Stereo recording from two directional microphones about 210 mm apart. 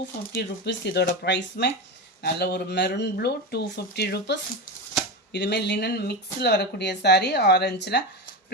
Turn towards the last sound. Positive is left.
turn(degrees=55)  # may be behind; listen again after turning